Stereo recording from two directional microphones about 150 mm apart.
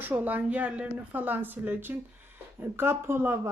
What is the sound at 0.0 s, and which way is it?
Speech, 10° right (ahead or behind).